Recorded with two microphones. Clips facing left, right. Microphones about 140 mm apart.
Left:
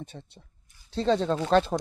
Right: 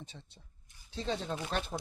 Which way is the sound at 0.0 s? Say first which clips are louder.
Left 9 dB; 55° left (ahead or behind).